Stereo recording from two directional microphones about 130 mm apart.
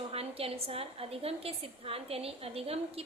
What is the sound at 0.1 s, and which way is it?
A woman's voice, 50° right (ahead or behind).